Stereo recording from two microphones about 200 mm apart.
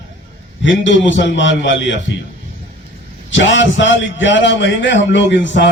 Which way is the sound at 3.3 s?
65° left (ahead or behind).